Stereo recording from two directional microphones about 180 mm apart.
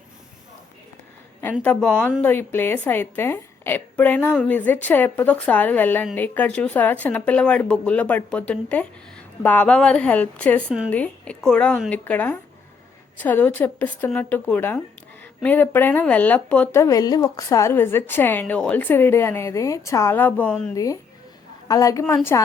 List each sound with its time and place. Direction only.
1.6 s speech: 5° left (ahead or behind)
20.7 s a woman's voice: 20° left (ahead or behind)